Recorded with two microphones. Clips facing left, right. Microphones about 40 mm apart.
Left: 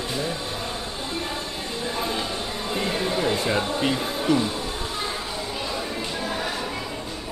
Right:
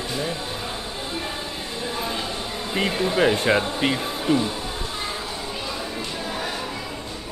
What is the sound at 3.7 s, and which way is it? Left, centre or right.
Speech, centre.